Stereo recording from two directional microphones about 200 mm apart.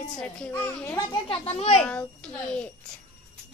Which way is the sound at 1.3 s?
30° left (ahead or behind).